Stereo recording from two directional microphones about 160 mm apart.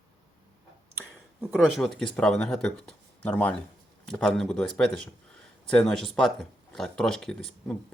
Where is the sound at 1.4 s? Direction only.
5° right (ahead or behind).